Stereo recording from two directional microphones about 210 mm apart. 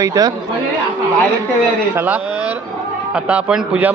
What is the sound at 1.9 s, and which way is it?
A man's voice, 10° right (ahead or behind).